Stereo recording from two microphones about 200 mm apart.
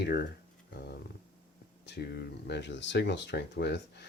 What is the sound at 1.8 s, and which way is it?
Speech, 55° left (ahead or behind).